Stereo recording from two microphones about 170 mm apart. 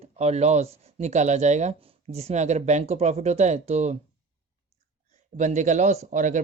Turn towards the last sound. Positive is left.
turn(degrees=-50)  # may be behind; listen again after turning